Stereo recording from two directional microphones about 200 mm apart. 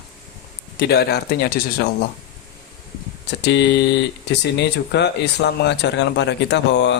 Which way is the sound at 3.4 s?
60° left (ahead or behind).